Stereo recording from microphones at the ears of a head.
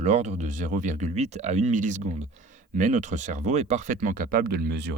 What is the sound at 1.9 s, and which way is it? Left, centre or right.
Speech, right.